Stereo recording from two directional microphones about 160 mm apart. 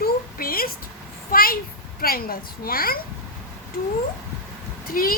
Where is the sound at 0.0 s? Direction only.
65° left (ahead or behind).